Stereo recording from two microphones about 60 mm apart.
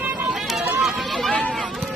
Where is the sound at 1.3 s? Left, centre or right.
Centre.